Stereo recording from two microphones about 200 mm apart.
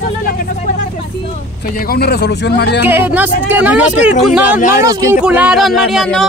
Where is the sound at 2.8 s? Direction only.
10° right (ahead or behind).